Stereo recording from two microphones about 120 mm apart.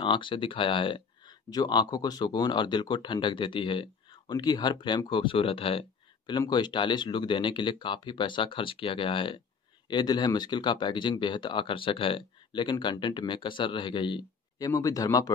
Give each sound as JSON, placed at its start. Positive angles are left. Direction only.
{"t": 0.0, "sound": "speech", "side_deg": 45}
{"t": 6.3, "sound": "speech", "side_deg": 35}
{"t": 14.6, "sound": "speech", "side_deg": 30}